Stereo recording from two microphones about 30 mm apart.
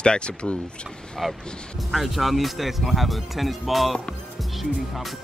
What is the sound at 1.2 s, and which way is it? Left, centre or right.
Speech, centre.